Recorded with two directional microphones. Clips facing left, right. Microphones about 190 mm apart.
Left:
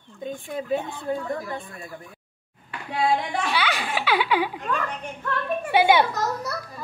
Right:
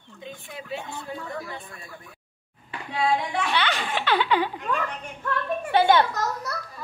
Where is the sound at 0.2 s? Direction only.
50° left (ahead or behind).